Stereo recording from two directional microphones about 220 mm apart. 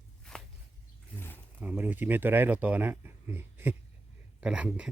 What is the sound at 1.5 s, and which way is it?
Speech, 10° right (ahead or behind).